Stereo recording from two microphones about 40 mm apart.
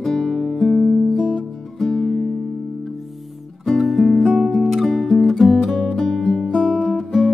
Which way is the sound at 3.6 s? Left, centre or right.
Centre.